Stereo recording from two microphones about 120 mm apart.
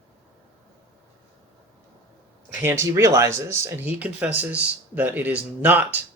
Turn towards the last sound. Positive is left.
turn(degrees=-15)  # may be behind; listen again after turning